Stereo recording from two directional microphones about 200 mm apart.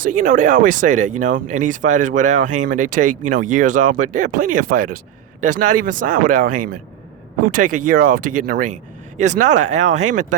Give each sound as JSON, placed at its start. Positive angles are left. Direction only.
{"t": 0.0, "sound": "speech", "side_deg": -40}